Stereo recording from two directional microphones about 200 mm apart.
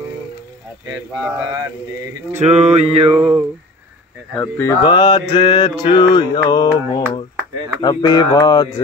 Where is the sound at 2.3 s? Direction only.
35° right (ahead or behind).